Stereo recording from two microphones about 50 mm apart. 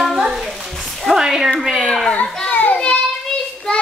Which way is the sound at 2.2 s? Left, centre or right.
Centre.